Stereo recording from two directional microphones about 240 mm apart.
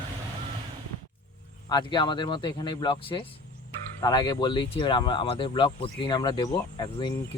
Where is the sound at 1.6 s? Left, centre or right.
Centre.